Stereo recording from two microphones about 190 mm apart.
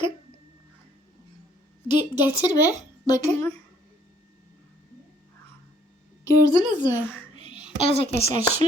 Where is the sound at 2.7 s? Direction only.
40° right (ahead or behind).